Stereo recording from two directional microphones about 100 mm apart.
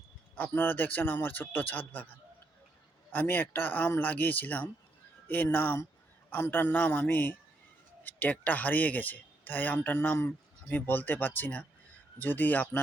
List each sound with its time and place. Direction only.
0.3 s speech: 20° left (ahead or behind)
3.1 s speech: 20° left (ahead or behind)